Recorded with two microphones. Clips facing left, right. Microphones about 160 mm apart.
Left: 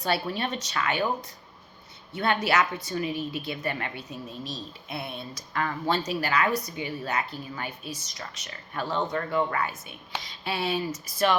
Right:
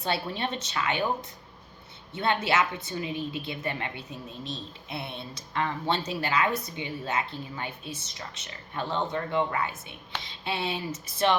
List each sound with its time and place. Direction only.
0.0 s a woman's voice: 25° right (ahead or behind)
2.1 s a woman's voice: 25° right (ahead or behind)